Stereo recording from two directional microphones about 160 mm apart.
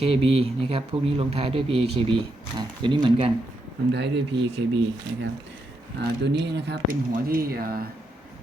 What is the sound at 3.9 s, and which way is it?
Speech, 90° right.